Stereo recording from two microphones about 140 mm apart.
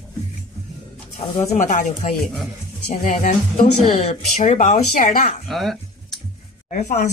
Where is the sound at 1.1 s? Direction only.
55° left (ahead or behind).